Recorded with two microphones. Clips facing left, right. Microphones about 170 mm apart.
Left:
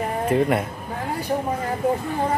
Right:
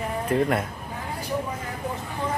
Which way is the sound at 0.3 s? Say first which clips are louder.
Left 3 dB; 5° left (ahead or behind).